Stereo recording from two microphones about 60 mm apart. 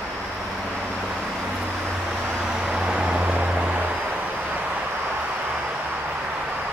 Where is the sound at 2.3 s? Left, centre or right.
Centre.